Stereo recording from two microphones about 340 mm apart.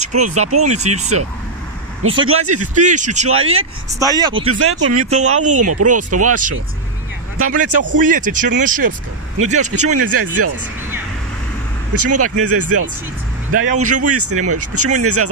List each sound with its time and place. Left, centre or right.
0.0 s vehicle: right
0.3 s speech: right
0.7 s speech: centre
2.2 s speech: right
2.7 s speech: right
3.3 s speech: right
4.0 s speech: centre
4.4 s speech: right
8.0 s speech: right
8.6 s speech: right
9.5 s speech: right
9.8 s speech: right
11.9 s speech: right